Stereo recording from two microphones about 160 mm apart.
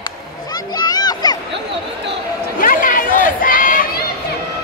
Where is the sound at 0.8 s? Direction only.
25° left (ahead or behind).